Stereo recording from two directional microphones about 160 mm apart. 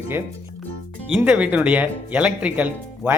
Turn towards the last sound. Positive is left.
turn(degrees=-10)  # may be behind; listen again after turning